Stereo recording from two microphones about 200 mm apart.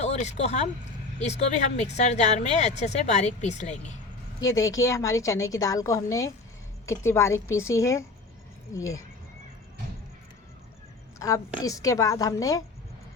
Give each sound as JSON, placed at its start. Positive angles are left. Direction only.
{"t": 0.0, "sound": "speech", "side_deg": 35}
{"t": 4.4, "sound": "a woman's voice", "side_deg": 15}
{"t": 11.6, "sound": "a woman's voice", "side_deg": 15}